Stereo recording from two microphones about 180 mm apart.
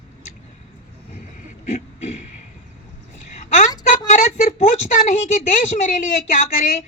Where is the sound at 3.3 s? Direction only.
40° left (ahead or behind).